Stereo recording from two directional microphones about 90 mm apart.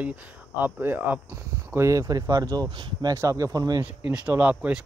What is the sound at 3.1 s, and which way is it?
Speech, 40° right (ahead or behind).